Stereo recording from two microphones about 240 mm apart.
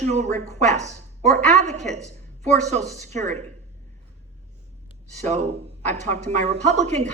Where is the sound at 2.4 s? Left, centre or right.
Right.